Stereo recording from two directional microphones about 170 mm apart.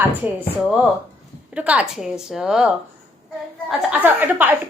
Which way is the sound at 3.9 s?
10° right (ahead or behind).